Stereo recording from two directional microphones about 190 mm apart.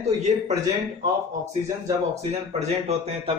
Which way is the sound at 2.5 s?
35° right (ahead or behind).